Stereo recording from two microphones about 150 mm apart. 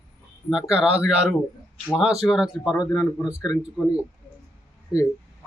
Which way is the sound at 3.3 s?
25° left (ahead or behind).